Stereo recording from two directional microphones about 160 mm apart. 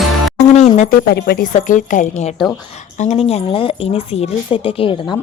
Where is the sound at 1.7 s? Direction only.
55° left (ahead or behind).